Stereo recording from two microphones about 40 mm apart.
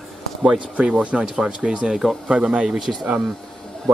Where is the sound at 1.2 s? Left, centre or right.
Centre.